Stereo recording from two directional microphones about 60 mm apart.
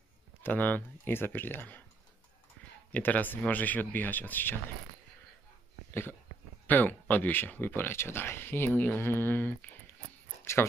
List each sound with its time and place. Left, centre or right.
0.4 s speech: left
2.9 s speech: left
6.7 s speech: left
10.4 s speech: left